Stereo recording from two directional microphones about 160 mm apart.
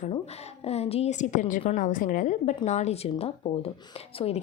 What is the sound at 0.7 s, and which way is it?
A woman's voice, 40° left (ahead or behind).